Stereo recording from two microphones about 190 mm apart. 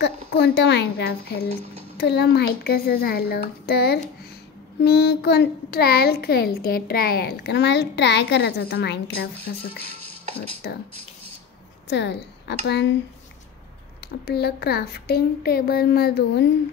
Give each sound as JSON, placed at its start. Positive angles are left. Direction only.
{"t": 0.0, "sound": "a child's voice", "side_deg": 65}
{"t": 10.6, "sound": "a child's voice", "side_deg": 60}
{"t": 11.9, "sound": "a woman's voice", "side_deg": 65}
{"t": 14.0, "sound": "a child's voice", "side_deg": 55}